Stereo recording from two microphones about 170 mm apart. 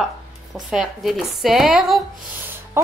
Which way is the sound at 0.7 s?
Centre (ahead or behind).